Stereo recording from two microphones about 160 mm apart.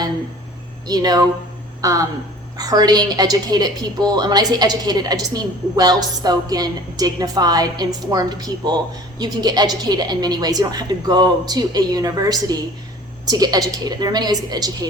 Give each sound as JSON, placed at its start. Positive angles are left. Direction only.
{"t": 0.9, "sound": "a woman's voice", "side_deg": -25}